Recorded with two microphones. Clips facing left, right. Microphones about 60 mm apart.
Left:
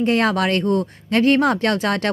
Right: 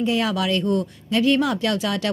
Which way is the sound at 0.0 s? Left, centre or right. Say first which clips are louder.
Left 4 dB; left.